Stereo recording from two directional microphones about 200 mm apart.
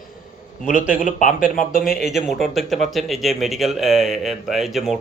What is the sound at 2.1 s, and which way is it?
Speech, centre (ahead or behind).